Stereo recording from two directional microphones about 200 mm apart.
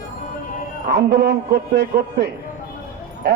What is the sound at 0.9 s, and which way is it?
A man's voice, 55° right (ahead or behind).